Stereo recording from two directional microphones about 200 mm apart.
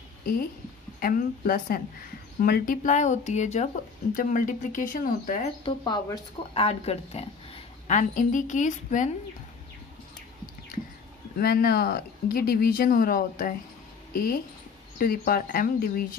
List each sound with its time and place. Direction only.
0.2 s speech: 45° left (ahead or behind)
5.7 s speech: 20° left (ahead or behind); by 9.1 s 40° left (ahead or behind)
11.3 s speech: 50° left (ahead or behind)
15.0 s speech: 45° left (ahead or behind)